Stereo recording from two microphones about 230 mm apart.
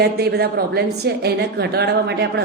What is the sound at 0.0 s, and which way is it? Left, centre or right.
A woman's voice, right.